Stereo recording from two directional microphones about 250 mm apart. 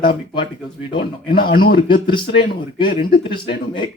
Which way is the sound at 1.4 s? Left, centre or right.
Left.